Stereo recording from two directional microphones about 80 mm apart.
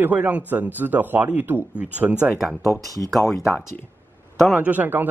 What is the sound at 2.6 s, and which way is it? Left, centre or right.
Speech, left.